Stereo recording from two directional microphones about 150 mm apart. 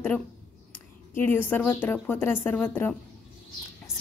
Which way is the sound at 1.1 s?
15° left (ahead or behind).